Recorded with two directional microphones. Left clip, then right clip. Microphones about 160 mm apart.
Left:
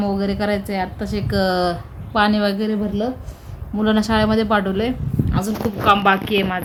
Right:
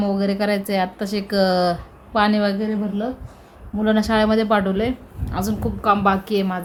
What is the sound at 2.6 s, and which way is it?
Speech, 20° left (ahead or behind).